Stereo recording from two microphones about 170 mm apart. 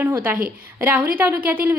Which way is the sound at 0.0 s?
10° right (ahead or behind).